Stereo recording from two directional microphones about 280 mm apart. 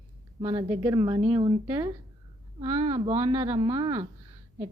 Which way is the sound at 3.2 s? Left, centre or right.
Centre.